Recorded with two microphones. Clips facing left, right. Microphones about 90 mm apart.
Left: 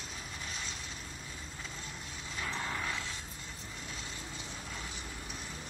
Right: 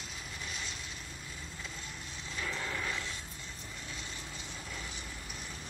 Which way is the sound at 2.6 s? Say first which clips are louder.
Left 2 dB; 25° left (ahead or behind).